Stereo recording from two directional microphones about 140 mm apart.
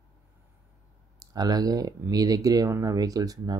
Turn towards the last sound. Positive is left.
turn(degrees=-25)  # may be behind; listen again after turning